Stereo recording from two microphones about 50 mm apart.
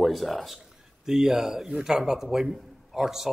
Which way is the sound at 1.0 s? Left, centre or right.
Centre.